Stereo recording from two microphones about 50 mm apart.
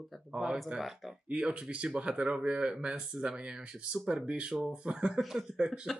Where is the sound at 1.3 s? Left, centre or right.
Centre.